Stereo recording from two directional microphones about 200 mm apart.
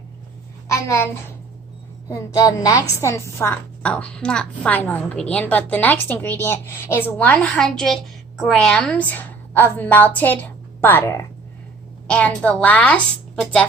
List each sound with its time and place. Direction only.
0.7 s a child's voice: 15° left (ahead or behind)